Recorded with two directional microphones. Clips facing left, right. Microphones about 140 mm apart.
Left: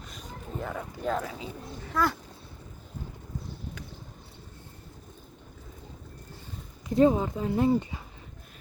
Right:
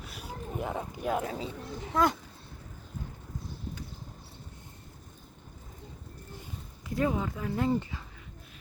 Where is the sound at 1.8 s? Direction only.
20° right (ahead or behind).